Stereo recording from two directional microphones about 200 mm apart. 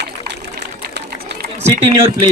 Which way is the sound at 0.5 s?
60° right (ahead or behind).